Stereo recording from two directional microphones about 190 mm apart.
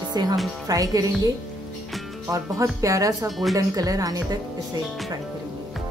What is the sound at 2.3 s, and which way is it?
Speech, 15° right (ahead or behind).